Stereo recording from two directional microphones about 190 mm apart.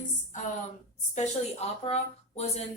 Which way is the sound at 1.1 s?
35° left (ahead or behind).